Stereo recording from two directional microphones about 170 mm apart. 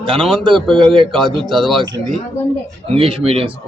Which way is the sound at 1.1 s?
Centre (ahead or behind).